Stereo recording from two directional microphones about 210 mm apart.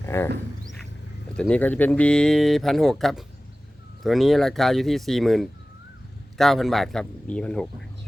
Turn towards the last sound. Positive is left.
turn(degrees=5)  # may be behind; listen again after turning